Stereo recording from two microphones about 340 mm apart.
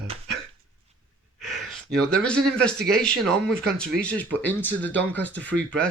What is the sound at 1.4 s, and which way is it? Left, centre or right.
Speech, centre.